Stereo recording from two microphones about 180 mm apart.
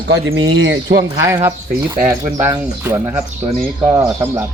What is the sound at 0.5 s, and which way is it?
Speech, 90° right.